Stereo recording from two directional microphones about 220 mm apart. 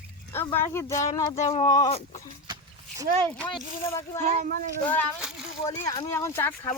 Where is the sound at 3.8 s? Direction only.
10° left (ahead or behind).